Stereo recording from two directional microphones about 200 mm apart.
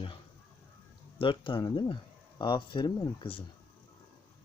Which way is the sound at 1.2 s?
25° left (ahead or behind).